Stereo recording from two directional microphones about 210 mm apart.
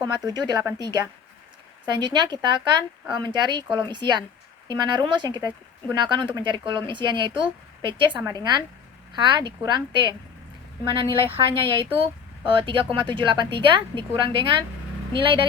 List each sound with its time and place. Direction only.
0.3 s speech: 20° right (ahead or behind)